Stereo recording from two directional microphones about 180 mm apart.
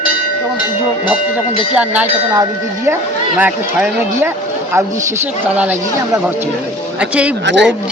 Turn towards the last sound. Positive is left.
turn(degrees=-75)  # may be behind; listen again after turning